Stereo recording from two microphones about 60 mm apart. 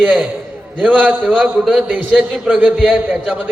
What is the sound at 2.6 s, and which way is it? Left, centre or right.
Speech, right.